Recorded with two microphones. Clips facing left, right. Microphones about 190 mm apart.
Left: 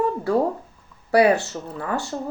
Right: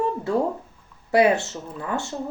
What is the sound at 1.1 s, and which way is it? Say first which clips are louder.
Speech: left 1 dB; 20° right (ahead or behind).